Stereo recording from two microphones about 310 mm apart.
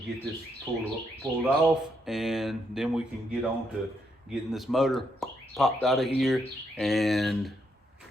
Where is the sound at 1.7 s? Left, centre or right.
Centre.